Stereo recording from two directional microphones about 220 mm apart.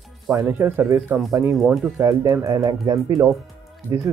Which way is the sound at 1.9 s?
15° right (ahead or behind).